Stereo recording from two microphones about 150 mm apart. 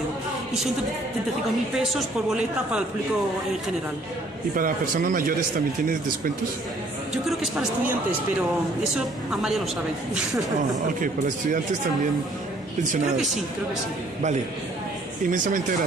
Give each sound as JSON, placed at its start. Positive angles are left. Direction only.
{"t": 1.8, "sound": "a woman's voice", "side_deg": -5}
{"t": 4.6, "sound": "a man's voice", "side_deg": -65}
{"t": 8.9, "sound": "a woman's voice", "side_deg": -5}
{"t": 15.3, "sound": "speech", "side_deg": -60}